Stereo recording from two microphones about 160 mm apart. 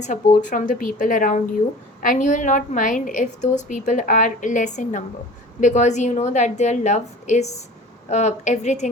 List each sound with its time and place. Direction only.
0.0 s a woman's voice: 50° left (ahead or behind)